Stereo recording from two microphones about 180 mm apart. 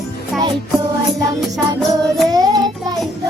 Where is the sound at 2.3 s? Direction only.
20° right (ahead or behind).